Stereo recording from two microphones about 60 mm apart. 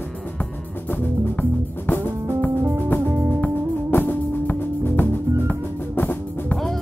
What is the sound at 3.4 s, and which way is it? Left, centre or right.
Music, left.